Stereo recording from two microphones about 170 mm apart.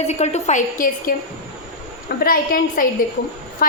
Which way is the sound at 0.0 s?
40° left (ahead or behind).